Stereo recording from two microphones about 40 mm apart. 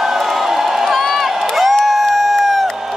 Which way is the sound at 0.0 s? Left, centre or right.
Centre.